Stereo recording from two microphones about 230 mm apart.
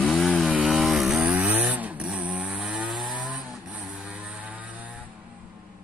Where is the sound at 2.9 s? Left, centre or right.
Right.